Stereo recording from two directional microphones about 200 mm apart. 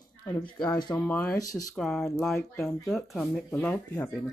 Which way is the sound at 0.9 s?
10° left (ahead or behind).